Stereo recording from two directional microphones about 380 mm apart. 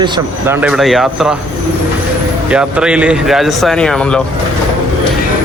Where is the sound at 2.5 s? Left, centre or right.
Centre.